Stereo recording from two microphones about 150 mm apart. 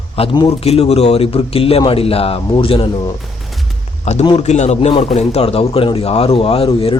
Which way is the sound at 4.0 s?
45° left (ahead or behind).